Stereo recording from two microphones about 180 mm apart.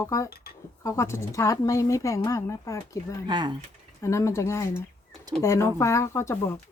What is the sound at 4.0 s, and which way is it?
A woman's voice, 15° left (ahead or behind).